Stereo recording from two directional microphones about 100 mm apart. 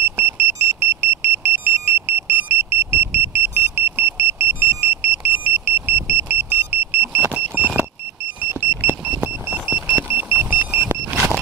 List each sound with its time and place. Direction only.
0.2 s vehicle: 25° right (ahead or behind)
10.8 s vehicle: 10° right (ahead or behind)